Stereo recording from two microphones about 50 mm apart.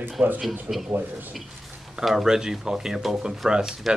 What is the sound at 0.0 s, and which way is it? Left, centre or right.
Speech, right.